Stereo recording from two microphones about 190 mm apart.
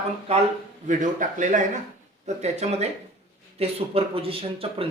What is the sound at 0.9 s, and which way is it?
Speech, 40° right (ahead or behind).